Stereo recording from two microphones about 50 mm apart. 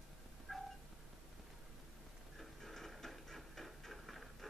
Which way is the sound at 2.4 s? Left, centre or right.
Centre.